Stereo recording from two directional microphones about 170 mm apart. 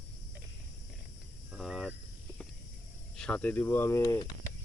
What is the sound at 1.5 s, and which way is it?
Cricket, centre (ahead or behind).